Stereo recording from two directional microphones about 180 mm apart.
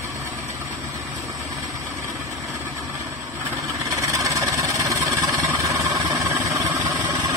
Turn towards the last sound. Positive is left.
turn(degrees=-15)  # may be behind; listen again after turning